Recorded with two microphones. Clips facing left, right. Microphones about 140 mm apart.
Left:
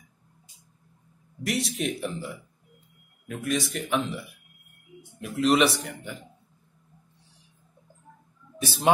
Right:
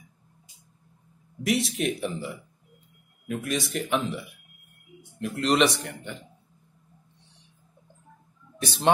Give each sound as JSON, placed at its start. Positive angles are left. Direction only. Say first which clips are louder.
{"t": 1.4, "sound": "speech", "louder": "right 3 dB", "side_deg": 0}
{"t": 8.9, "sound": "speech", "louder": "even", "side_deg": 5}